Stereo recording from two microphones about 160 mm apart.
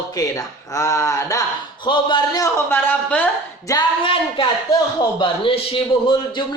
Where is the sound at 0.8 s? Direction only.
20° left (ahead or behind).